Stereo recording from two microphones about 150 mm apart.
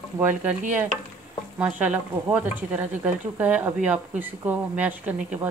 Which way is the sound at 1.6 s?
10° right (ahead or behind).